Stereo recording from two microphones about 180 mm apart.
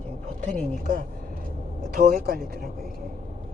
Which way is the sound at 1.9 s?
55° right (ahead or behind).